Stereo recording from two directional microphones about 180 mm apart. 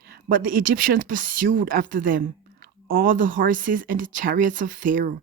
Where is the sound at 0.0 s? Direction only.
50° right (ahead or behind).